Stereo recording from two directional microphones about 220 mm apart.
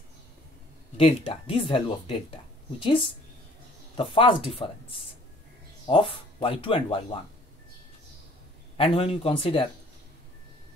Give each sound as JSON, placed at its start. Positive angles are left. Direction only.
{"t": 0.9, "sound": "speech", "side_deg": 25}
{"t": 5.9, "sound": "speech", "side_deg": 25}
{"t": 8.7, "sound": "speech", "side_deg": 25}